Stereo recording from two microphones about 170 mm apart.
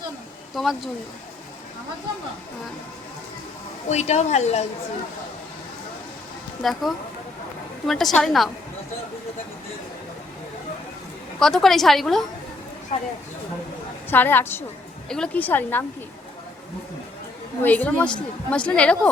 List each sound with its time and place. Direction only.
0.5 s a woman's voice: centre (ahead or behind)
3.8 s a woman's voice: 40° left (ahead or behind)
6.6 s a woman's voice: centre (ahead or behind)
11.3 s a woman's voice: 5° left (ahead or behind)
14.1 s a woman's voice: 10° left (ahead or behind)
17.6 s a woman's voice: 10° left (ahead or behind)